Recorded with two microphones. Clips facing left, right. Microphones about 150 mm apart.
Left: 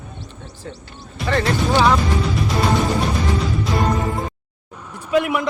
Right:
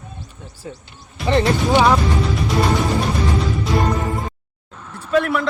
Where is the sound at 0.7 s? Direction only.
10° right (ahead or behind).